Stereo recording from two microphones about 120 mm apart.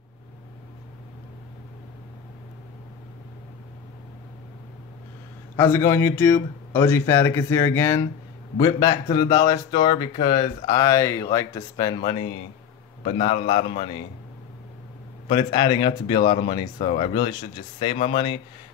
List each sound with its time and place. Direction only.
5.6 s speech: 20° left (ahead or behind); by 10.0 s 40° left (ahead or behind)
10.1 s speech: 55° left (ahead or behind)
10.7 s speech: 25° left (ahead or behind); by 14.0 s 50° left (ahead or behind)
15.5 s speech: 35° left (ahead or behind)
17.9 s speech: 55° left (ahead or behind)